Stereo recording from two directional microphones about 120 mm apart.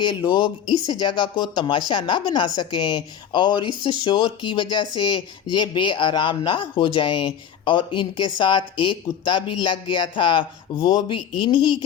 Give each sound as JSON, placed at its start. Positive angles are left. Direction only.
{"t": 0.0, "sound": "speech", "side_deg": 45}
{"t": 3.7, "sound": "speech", "side_deg": -40}
{"t": 4.0, "sound": "speech", "side_deg": 40}